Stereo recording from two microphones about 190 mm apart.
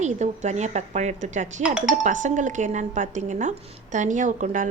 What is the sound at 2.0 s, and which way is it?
Speech, 40° right (ahead or behind).